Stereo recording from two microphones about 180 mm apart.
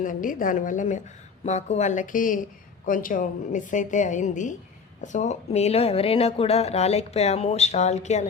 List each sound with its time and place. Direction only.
0.0 s a woman's voice: 45° left (ahead or behind)